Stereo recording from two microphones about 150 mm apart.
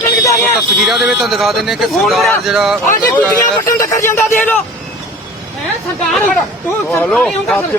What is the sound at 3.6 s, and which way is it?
Speech, 20° left (ahead or behind).